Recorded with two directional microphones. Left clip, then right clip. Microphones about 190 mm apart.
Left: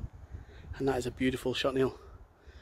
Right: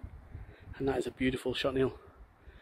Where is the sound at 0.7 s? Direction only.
10° left (ahead or behind).